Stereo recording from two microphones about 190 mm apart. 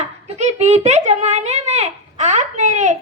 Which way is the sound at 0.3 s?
35° right (ahead or behind).